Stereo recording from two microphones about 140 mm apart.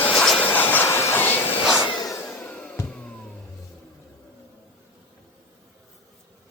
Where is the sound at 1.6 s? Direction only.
5° right (ahead or behind).